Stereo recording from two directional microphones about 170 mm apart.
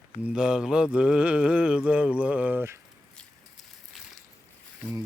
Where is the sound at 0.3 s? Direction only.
5° right (ahead or behind).